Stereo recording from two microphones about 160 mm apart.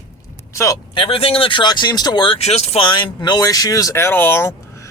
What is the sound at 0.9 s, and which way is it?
Speech, 35° left (ahead or behind).